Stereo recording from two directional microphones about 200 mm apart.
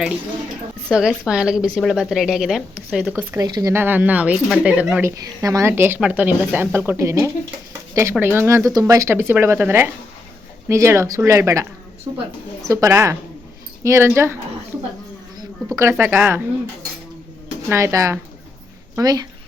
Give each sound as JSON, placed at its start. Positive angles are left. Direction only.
{"t": 0.9, "sound": "a woman's voice", "side_deg": -5}
{"t": 3.4, "sound": "speech", "side_deg": -20}
{"t": 15.4, "sound": "speech", "side_deg": -15}
{"t": 17.7, "sound": "speech", "side_deg": -15}